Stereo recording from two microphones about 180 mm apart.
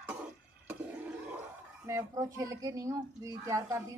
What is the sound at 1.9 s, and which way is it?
A woman's voice, 15° right (ahead or behind).